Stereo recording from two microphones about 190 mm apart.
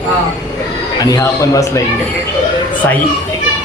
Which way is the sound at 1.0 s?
20° left (ahead or behind).